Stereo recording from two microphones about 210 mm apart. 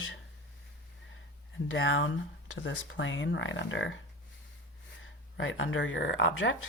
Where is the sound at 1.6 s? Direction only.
65° left (ahead or behind).